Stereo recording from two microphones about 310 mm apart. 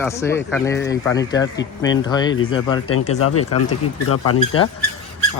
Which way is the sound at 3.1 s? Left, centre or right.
Left.